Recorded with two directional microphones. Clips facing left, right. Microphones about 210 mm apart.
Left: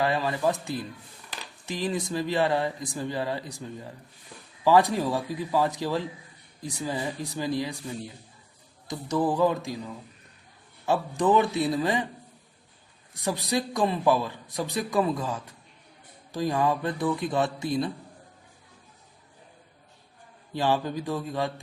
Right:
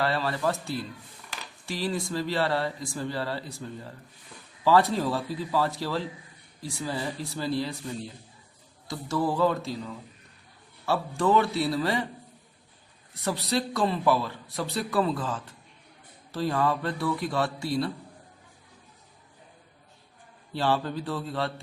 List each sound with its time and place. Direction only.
0.0 s a man's voice: 15° left (ahead or behind)
13.2 s a man's voice: 15° left (ahead or behind)
20.5 s a man's voice: 15° left (ahead or behind)